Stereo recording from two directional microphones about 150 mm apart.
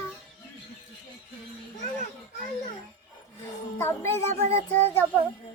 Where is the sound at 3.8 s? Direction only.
15° left (ahead or behind).